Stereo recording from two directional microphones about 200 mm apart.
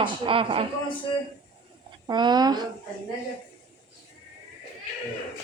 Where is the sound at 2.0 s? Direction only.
20° right (ahead or behind).